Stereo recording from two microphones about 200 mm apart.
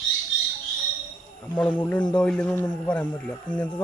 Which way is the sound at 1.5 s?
5° left (ahead or behind).